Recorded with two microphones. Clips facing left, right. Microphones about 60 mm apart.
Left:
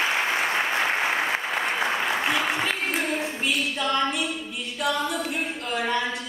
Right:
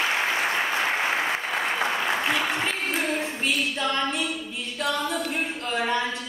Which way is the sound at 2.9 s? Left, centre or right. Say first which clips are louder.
Even; centre.